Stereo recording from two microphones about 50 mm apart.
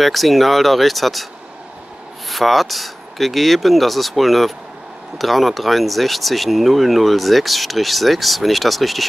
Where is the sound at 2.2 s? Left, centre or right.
Centre.